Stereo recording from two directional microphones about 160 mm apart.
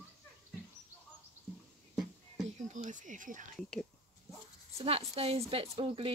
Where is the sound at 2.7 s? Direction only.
50° right (ahead or behind).